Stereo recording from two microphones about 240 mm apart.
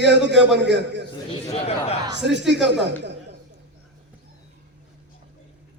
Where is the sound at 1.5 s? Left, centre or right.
Left.